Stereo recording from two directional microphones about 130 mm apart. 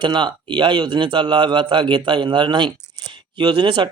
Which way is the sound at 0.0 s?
35° right (ahead or behind).